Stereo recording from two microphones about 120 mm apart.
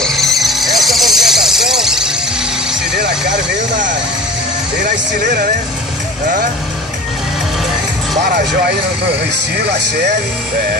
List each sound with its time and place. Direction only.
0.0 s vehicle: centre (ahead or behind)
4.8 s speech: 90° right